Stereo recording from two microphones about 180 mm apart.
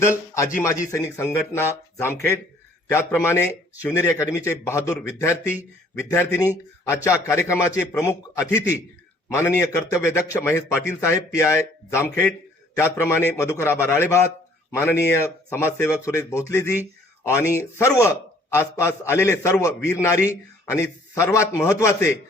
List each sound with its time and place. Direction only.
0.6 s a man's voice: 15° left (ahead or behind)